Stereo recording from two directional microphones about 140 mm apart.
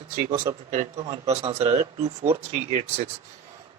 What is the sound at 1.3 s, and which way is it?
Speech, 50° right (ahead or behind).